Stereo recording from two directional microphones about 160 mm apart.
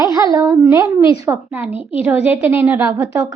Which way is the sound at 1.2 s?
20° right (ahead or behind).